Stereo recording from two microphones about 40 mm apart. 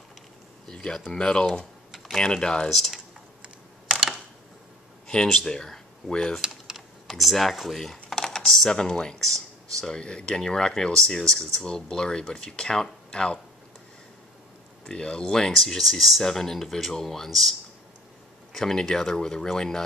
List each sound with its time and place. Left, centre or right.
0.7 s speech: centre
1.1 s speech: left
5.0 s speech: centre
6.4 s typing: centre
7.1 s speech: centre
8.1 s computer keyboard: centre
8.6 s speech: centre
11.6 s speech: left
14.9 s speech: left
15.5 s speech: centre